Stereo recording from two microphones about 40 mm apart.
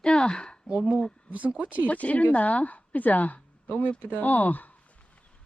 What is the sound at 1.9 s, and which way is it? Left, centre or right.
Speech, left.